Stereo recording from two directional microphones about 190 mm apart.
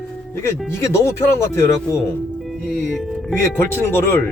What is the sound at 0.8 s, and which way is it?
Speech, 15° left (ahead or behind).